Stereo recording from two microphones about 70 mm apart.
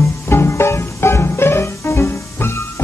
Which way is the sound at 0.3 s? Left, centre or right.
Left.